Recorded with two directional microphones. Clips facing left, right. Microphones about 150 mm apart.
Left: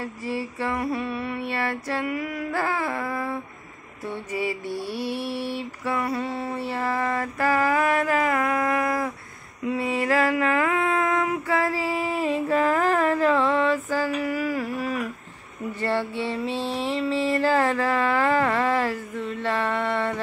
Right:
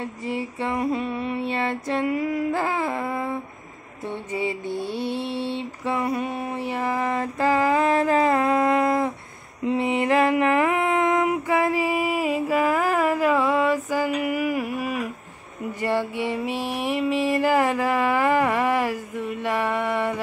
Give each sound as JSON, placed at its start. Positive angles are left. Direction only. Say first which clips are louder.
{"t": 0.0, "sound": "music", "louder": "right 1 dB", "side_deg": -20}
{"t": 4.0, "sound": "mantra", "louder": "right 1 dB", "side_deg": -20}
{"t": 9.7, "sound": "a sound", "louder": "right 3 dB", "side_deg": -20}
{"t": 15.8, "sound": "music", "louder": "right 2 dB", "side_deg": -15}